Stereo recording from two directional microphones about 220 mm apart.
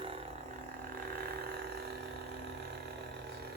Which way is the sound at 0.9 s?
45° right (ahead or behind).